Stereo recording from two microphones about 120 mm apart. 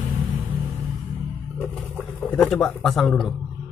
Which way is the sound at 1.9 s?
10° left (ahead or behind).